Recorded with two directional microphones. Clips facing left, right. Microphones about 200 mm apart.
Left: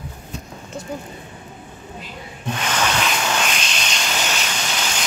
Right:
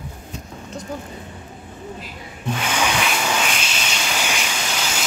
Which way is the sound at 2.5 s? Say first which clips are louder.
Even; 10° right (ahead or behind).